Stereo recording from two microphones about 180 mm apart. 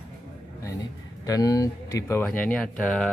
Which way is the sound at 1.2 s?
20° left (ahead or behind).